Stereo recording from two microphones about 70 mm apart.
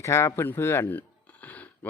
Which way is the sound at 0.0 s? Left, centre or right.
Left.